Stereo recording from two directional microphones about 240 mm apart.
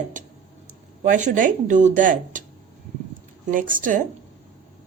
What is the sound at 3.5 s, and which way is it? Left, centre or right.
Speech, right.